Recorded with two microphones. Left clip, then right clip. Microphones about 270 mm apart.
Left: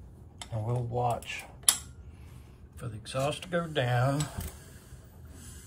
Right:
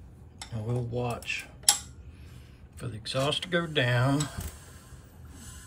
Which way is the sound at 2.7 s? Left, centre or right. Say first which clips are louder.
Right 3 dB; centre.